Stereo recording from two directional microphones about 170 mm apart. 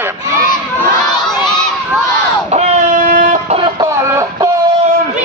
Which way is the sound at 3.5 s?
30° right (ahead or behind).